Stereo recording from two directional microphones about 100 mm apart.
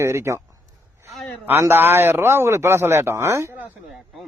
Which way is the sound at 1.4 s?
20° right (ahead or behind).